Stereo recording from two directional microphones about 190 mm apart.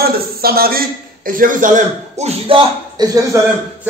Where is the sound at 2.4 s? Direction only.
25° right (ahead or behind).